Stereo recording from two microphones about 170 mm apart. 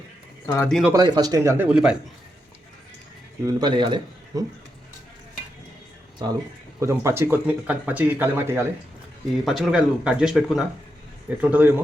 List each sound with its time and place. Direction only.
0.4 s speech: 15° left (ahead or behind)
0.7 s speech: centre (ahead or behind)
0.9 s speech: 25° right (ahead or behind); by 2.0 s 5° right (ahead or behind)
3.4 s speech: 25° right (ahead or behind)
6.2 s speech: 25° right (ahead or behind)
9.4 s speech: centre (ahead or behind)